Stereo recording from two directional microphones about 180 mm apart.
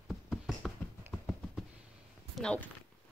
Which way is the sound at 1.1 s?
5° left (ahead or behind).